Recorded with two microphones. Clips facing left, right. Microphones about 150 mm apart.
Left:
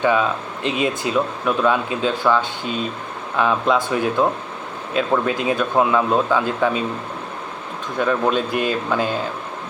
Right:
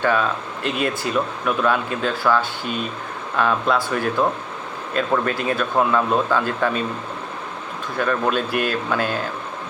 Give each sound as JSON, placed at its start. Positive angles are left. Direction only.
{"t": 0.0, "sound": "speech", "side_deg": 15}
{"t": 0.6, "sound": "speech", "side_deg": 0}
{"t": 7.9, "sound": "speech", "side_deg": 5}